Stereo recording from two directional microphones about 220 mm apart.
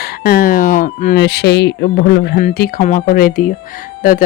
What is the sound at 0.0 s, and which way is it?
Speech, 40° left (ahead or behind).